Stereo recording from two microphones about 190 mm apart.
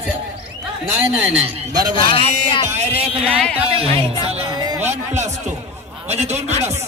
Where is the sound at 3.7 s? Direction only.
30° right (ahead or behind).